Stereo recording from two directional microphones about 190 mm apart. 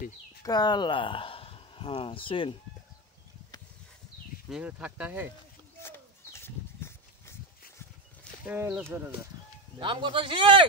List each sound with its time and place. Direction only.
0.4 s speech: 20° left (ahead or behind)
4.5 s speech: 5° right (ahead or behind)
5.8 s a sound: 15° left (ahead or behind)
8.5 s speech: 10° right (ahead or behind)
9.8 s speech: 25° right (ahead or behind)